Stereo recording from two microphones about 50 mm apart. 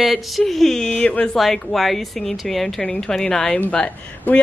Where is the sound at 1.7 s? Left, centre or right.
Centre.